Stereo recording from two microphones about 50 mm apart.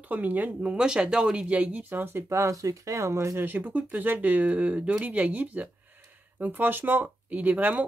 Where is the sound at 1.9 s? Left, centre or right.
Right.